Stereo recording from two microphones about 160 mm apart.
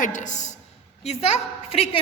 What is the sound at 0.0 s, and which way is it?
A woman's voice, 50° left (ahead or behind).